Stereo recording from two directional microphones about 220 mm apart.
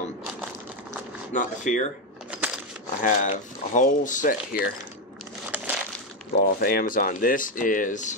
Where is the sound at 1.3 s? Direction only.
35° left (ahead or behind).